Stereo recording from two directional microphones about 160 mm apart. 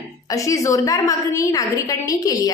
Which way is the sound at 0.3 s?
20° left (ahead or behind).